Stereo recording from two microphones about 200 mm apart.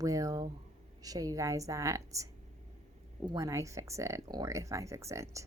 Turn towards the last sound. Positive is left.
turn(degrees=-15)  # may be behind; listen again after turning